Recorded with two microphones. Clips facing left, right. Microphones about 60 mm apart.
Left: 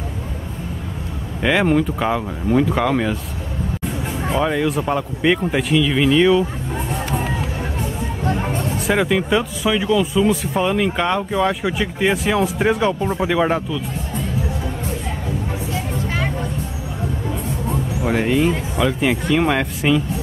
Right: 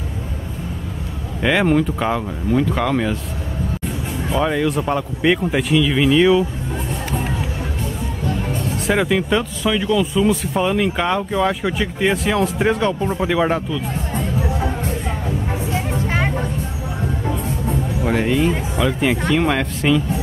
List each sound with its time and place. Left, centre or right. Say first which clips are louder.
1.4 s speech: even; centre
4.4 s speech: right 1 dB; centre
8.2 s a sound: left 2 dB; left
8.7 s speech: right 1 dB; centre
15.7 s music: right 3 dB; right
18.0 s speech: left 1 dB; centre